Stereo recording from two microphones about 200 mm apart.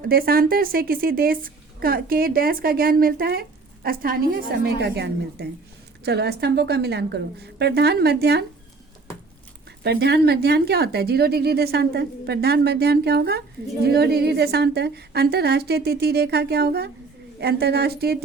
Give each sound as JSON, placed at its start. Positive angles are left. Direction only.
{"t": 0.0, "sound": "a woman's voice", "side_deg": -50}
{"t": 9.8, "sound": "speech", "side_deg": -55}